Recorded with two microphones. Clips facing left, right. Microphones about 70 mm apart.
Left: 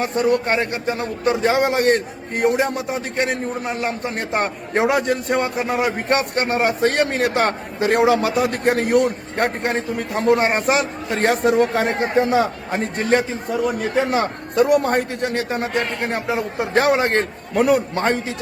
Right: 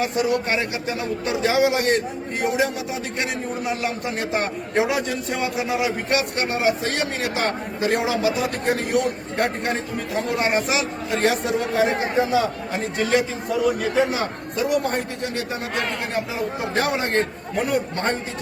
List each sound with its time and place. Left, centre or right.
0.0 s a man's voice: left
13.7 s a man's voice: left